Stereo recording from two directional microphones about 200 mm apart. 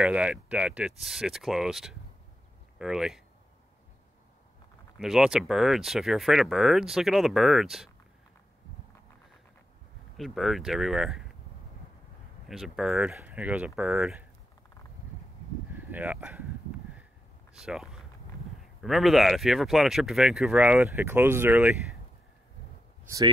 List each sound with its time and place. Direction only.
0.0 s speech: 5° right (ahead or behind)
4.9 s speech: centre (ahead or behind)
10.1 s speech: centre (ahead or behind)
12.4 s speech: centre (ahead or behind)
15.7 s speech: 10° right (ahead or behind)
17.6 s speech: centre (ahead or behind)
23.0 s speech: 15° right (ahead or behind)